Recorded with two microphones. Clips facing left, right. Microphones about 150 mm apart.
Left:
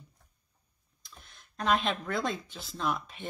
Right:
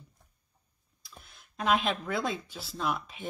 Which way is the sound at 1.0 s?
5° right (ahead or behind).